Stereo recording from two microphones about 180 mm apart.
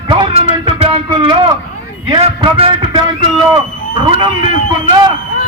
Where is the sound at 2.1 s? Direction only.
25° right (ahead or behind).